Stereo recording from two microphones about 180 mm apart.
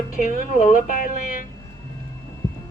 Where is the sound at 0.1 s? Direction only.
45° left (ahead or behind).